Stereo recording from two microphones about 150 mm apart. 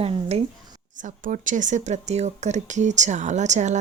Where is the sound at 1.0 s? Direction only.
60° right (ahead or behind).